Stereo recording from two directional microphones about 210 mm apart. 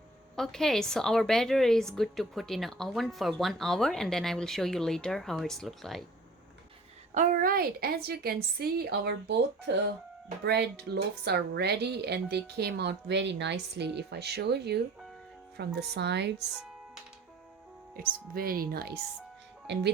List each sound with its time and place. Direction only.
0.3 s a woman's voice: centre (ahead or behind)
7.1 s a woman's voice: 35° right (ahead or behind); by 16.3 s 55° right (ahead or behind)
18.3 s a woman's voice: 45° right (ahead or behind)